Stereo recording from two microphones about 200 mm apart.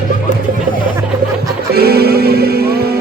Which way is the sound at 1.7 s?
50° right (ahead or behind).